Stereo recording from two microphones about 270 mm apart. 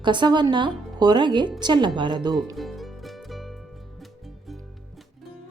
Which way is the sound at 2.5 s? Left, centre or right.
Centre.